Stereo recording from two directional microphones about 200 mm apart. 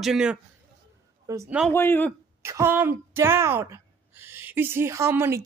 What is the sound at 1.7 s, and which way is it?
Speech, 10° left (ahead or behind).